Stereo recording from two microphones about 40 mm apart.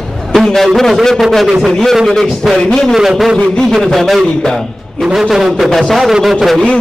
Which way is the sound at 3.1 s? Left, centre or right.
Centre.